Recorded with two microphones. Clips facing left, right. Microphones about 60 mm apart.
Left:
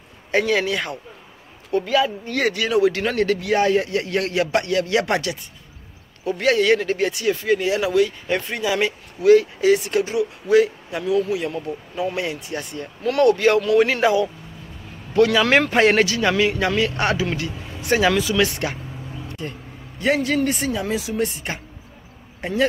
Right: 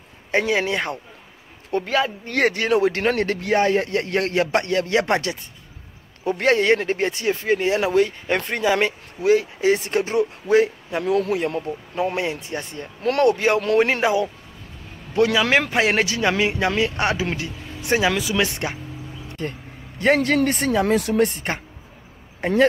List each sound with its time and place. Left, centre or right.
0.3 s speech: right
1.7 s speech: right
9.2 s speech: right
11.1 s speech: right
13.2 s a man's voice: right
15.5 s speech: centre
16.1 s a man's voice: centre
19.4 s speech: right